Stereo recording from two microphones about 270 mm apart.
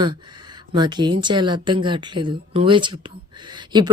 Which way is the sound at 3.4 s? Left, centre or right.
Centre.